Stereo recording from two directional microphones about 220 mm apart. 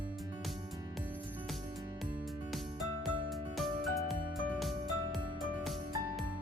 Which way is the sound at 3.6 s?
Centre (ahead or behind).